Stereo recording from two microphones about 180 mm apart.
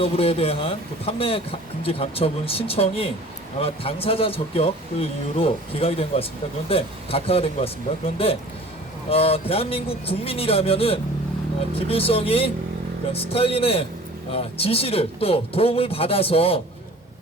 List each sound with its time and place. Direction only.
0.0 s speech: 30° left (ahead or behind)